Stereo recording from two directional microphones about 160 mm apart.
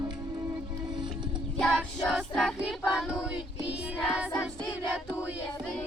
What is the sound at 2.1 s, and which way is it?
Child singing, 5° left (ahead or behind).